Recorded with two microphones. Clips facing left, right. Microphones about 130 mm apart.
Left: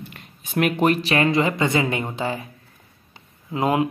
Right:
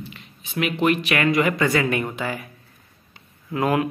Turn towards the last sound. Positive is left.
turn(degrees=20)  # may be behind; listen again after turning